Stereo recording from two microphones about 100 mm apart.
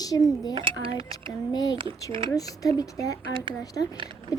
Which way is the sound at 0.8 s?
65° right (ahead or behind).